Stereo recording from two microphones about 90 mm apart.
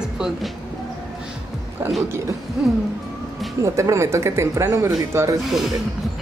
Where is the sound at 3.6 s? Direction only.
35° right (ahead or behind).